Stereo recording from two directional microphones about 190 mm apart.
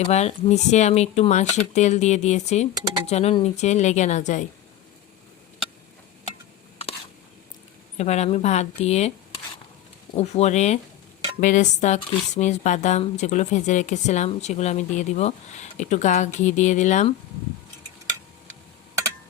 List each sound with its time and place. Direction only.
0.1 s speech: 35° left (ahead or behind)
2.7 s speech: 20° right (ahead or behind)
3.1 s speech: 35° left (ahead or behind)
7.9 s speech: 35° left (ahead or behind)
10.2 s speech: 35° left (ahead or behind)